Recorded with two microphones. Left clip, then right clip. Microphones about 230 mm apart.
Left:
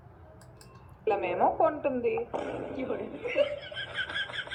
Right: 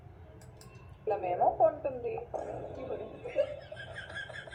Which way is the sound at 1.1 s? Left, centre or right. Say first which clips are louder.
Left 3 dB; left.